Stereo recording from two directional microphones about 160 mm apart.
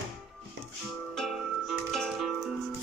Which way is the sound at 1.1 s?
Centre (ahead or behind).